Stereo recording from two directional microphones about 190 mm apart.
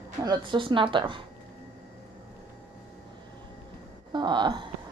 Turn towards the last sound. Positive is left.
turn(degrees=-25)  # may be behind; listen again after turning